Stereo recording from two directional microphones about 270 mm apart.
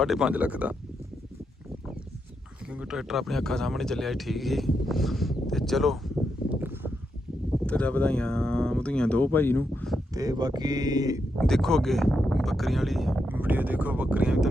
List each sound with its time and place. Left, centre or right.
0.0 s speech: centre
2.7 s speech: centre
6.5 s a sound: centre
7.7 s speech: centre
10.2 s speech: centre
11.3 s speech: centre